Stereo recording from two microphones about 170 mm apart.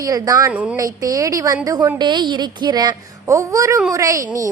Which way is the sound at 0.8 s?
20° right (ahead or behind).